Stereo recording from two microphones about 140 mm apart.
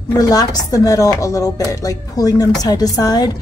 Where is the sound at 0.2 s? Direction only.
25° left (ahead or behind).